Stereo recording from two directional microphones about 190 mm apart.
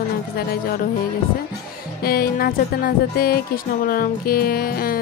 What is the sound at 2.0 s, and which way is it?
Speech, 50° left (ahead or behind).